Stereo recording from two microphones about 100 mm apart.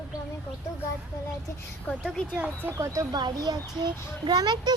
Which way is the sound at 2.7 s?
30° right (ahead or behind).